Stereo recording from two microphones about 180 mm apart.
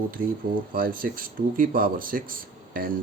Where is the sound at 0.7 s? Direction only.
50° right (ahead or behind).